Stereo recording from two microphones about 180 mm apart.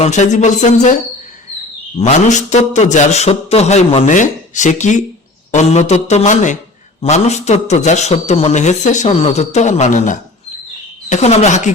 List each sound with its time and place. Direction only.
0.0 s a man's voice: 40° left (ahead or behind)
2.0 s a man's voice: 40° left (ahead or behind)